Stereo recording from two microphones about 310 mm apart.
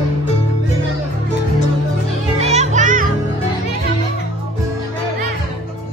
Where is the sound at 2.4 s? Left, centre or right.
Right.